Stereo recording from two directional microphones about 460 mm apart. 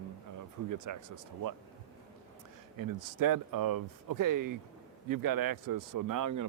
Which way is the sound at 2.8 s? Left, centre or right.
Right.